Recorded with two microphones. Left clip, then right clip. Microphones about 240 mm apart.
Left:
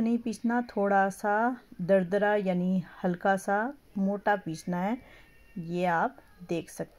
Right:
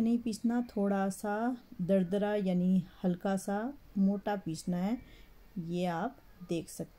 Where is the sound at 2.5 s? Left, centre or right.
Left.